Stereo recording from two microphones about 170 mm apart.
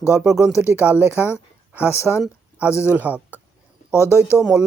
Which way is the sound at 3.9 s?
15° left (ahead or behind).